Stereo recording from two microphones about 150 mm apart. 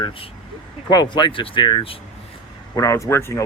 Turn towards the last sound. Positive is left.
turn(degrees=20)  # may be behind; listen again after turning